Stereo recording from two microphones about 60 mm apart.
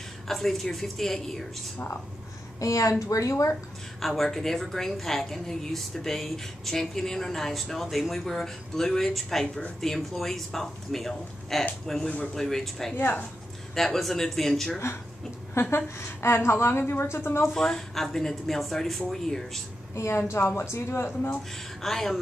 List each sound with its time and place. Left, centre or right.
0.3 s a woman's voice: centre
2.6 s a woman's voice: left
4.0 s a woman's voice: centre
12.9 s a woman's voice: left
13.7 s a woman's voice: centre
15.7 s a woman's voice: left
17.4 s a woman's voice: centre
20.0 s a woman's voice: left
21.8 s a woman's voice: centre